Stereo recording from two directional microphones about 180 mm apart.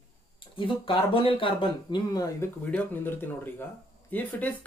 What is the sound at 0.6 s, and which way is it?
Speech, 30° left (ahead or behind).